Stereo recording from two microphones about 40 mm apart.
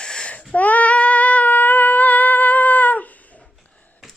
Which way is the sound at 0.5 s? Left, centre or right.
Left.